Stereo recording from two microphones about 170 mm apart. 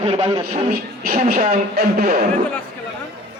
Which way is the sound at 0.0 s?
35° right (ahead or behind).